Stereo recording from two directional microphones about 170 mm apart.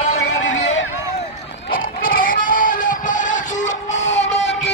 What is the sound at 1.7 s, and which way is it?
Music, 55° left (ahead or behind).